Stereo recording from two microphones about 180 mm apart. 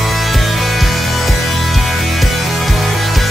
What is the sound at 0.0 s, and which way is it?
Music, centre (ahead or behind).